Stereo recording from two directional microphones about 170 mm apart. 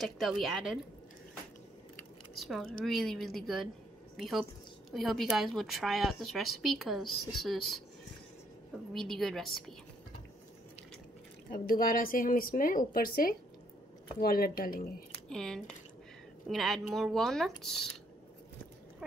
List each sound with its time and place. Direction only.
0.0 s a woman's voice: centre (ahead or behind)
2.3 s a woman's voice: centre (ahead or behind)
8.9 s a woman's voice: centre (ahead or behind)
11.5 s speech: 55° left (ahead or behind)
15.2 s a woman's voice: 5° left (ahead or behind)